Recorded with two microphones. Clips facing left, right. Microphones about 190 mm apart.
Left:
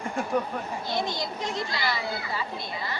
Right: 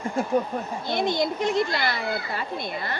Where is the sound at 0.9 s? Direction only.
55° right (ahead or behind).